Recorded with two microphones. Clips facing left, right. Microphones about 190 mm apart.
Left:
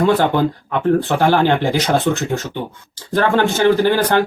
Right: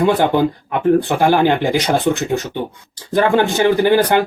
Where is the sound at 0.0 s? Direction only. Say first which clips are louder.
Right 1 dB; 10° right (ahead or behind).